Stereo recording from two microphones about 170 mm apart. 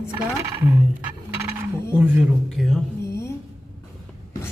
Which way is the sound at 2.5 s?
Centre (ahead or behind).